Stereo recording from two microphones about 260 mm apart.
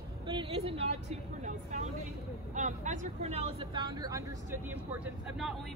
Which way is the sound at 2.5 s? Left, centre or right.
Right.